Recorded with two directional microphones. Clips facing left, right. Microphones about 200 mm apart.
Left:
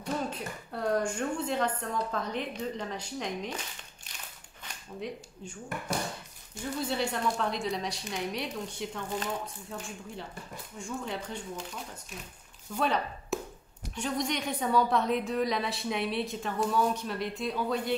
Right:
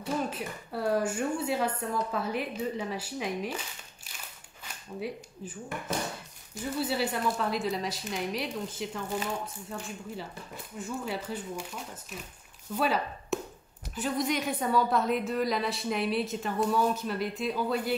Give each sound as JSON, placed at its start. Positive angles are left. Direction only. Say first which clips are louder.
{"t": 0.0, "sound": "speech", "louder": "right 2 dB", "side_deg": -5}
{"t": 5.0, "sound": "a woman's voice", "louder": "right 2 dB", "side_deg": -5}